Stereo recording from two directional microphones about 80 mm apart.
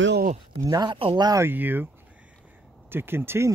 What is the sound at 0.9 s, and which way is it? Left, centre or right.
Speech, right.